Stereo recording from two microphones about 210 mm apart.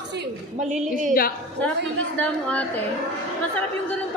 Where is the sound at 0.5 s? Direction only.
35° right (ahead or behind).